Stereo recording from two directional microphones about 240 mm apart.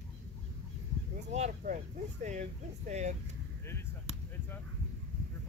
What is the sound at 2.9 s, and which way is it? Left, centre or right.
Speech, right.